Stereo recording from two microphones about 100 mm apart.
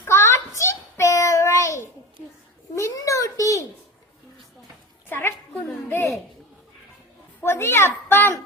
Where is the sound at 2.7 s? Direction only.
30° left (ahead or behind).